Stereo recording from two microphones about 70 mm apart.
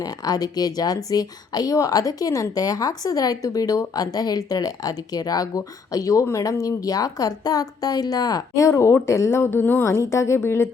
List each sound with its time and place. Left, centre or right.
0.0 s speech: left
8.5 s a woman's voice: left
9.8 s a woman's voice: left